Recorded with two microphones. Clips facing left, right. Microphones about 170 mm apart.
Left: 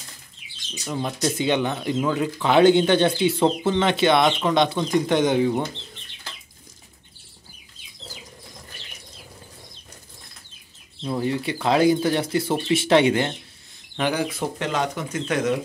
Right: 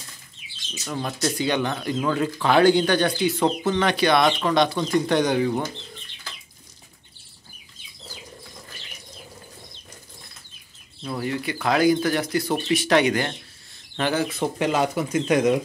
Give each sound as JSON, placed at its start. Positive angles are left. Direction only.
{"t": 0.8, "sound": "speech", "side_deg": 15}
{"t": 11.0, "sound": "speech", "side_deg": 25}
{"t": 13.9, "sound": "speech", "side_deg": 10}
{"t": 14.6, "sound": "speech", "side_deg": -10}